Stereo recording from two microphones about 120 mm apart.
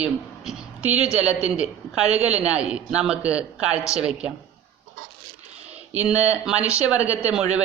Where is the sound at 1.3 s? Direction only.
60° right (ahead or behind).